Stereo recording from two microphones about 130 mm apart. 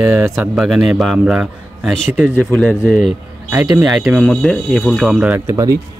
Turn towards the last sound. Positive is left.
turn(degrees=-25)  # may be behind; listen again after turning